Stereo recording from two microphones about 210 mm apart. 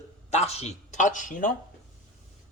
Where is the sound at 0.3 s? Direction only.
30° left (ahead or behind).